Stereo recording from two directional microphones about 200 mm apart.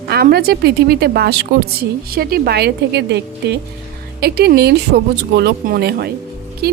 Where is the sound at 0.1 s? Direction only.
50° right (ahead or behind).